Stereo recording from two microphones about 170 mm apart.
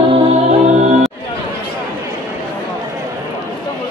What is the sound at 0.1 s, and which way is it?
Music, 40° right (ahead or behind).